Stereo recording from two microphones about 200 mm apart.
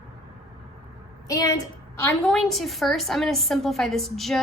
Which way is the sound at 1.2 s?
15° left (ahead or behind).